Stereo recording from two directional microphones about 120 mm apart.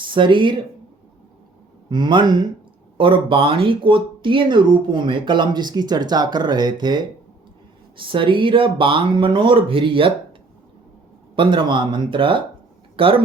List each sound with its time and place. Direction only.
0.0 s speech: 45° right (ahead or behind)
1.9 s speech: 40° right (ahead or behind)
11.3 s speech: 40° right (ahead or behind)